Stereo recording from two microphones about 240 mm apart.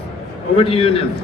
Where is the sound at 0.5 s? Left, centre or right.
Left.